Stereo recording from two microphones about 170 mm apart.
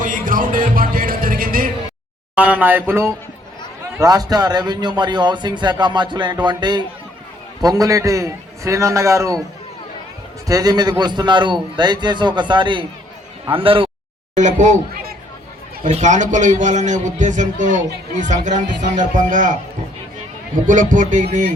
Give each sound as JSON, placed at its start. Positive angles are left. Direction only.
{"t": 0.0, "sound": "music", "side_deg": -50}
{"t": 2.3, "sound": "a man's voice", "side_deg": -10}
{"t": 10.4, "sound": "a man's voice", "side_deg": -20}
{"t": 14.3, "sound": "a man's voice", "side_deg": -45}
{"t": 15.8, "sound": "a man's voice", "side_deg": -45}
{"t": 20.7, "sound": "a man's voice", "side_deg": -50}